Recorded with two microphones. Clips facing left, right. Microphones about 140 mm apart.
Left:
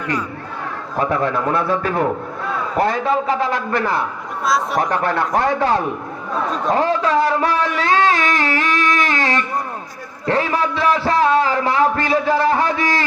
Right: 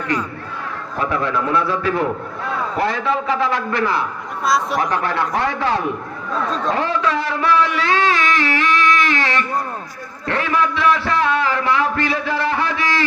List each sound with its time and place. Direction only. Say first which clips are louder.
0.9 s a man's voice: left 2 dB; 45° left (ahead or behind)
4.4 s speech: even; centre (ahead or behind)
4.8 s a man's voice: left 1 dB; 45° left (ahead or behind)